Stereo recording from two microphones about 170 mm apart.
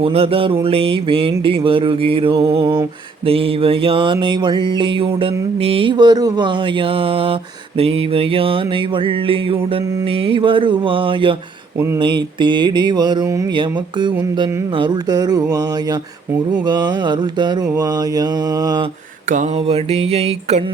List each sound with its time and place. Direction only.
0.0 s music: 35° right (ahead or behind)
11.9 s mantra: 30° right (ahead or behind)
19.3 s music: 40° right (ahead or behind)